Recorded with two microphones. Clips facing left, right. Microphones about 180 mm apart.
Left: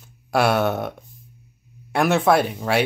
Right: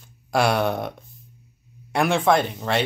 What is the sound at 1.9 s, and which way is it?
Speech, 5° left (ahead or behind).